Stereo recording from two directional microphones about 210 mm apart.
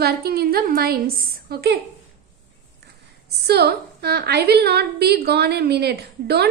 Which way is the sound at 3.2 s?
50° right (ahead or behind).